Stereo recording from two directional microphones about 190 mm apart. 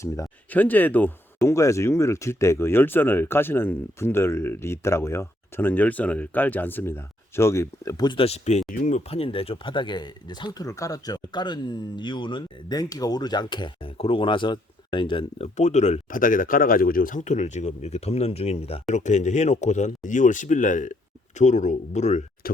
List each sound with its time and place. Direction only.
0.0 s speech: 10° left (ahead or behind); by 22.2 s 35° left (ahead or behind)